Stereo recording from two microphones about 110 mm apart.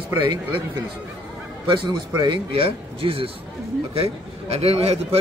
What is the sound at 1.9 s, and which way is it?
A man's voice, 45° right (ahead or behind).